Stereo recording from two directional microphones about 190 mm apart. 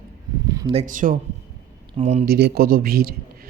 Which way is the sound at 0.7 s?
40° right (ahead or behind).